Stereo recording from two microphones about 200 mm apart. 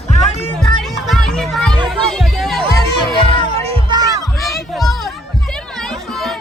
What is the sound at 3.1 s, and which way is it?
Music, 25° left (ahead or behind).